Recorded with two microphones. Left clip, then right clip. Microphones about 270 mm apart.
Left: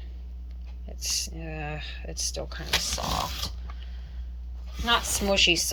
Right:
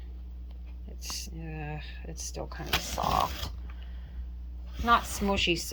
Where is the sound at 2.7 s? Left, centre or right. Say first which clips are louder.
Even; right.